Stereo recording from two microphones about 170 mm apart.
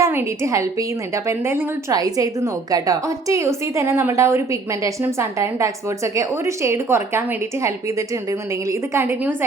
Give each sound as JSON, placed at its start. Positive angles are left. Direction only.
{"t": 0.0, "sound": "a woman's voice", "side_deg": -15}